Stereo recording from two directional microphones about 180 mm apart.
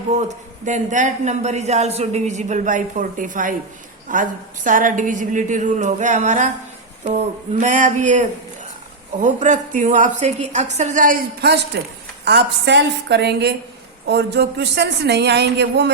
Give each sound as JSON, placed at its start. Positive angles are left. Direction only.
{"t": 0.2, "sound": "a man's voice", "side_deg": -40}
{"t": 7.6, "sound": "a woman's voice", "side_deg": -45}